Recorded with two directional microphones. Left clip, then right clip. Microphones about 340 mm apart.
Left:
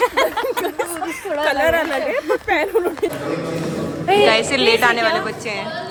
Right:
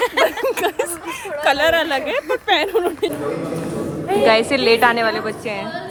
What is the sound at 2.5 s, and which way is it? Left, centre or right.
Speech, centre.